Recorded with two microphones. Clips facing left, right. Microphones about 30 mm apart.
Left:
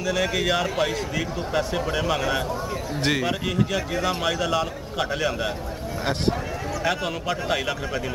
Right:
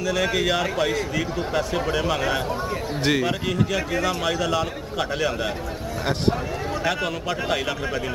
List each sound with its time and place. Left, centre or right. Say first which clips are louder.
0.0 s a man's voice: right 1 dB; centre
6.8 s a man's voice: left 1 dB; centre